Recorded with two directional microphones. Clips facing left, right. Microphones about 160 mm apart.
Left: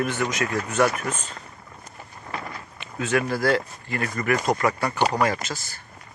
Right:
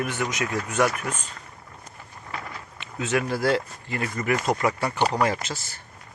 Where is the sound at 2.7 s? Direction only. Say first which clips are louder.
Left 1 dB; 20° right (ahead or behind).